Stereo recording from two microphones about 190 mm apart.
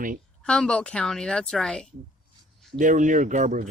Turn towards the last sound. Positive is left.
turn(degrees=-40)  # may be behind; listen again after turning